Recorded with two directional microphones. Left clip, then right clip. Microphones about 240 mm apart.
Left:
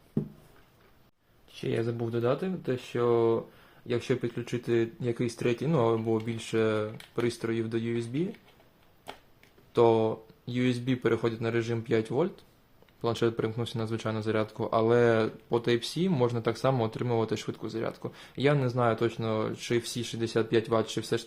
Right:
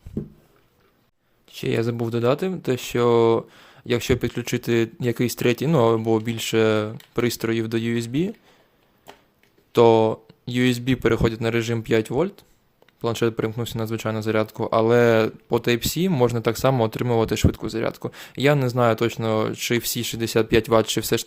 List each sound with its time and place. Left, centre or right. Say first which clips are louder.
1.6 s speech: right 7 dB; right
9.7 s speech: right 8 dB; right